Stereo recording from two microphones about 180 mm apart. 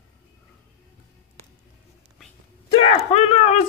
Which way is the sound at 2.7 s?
30° left (ahead or behind).